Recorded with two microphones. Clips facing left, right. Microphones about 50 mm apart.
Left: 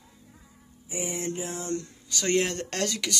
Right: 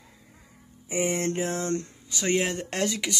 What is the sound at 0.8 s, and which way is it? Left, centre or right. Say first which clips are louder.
Speech: right 6 dB; right.